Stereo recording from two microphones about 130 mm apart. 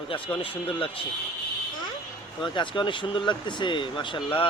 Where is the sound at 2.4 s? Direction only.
40° left (ahead or behind).